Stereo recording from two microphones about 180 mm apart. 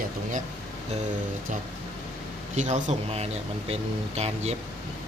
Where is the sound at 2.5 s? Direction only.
40° right (ahead or behind).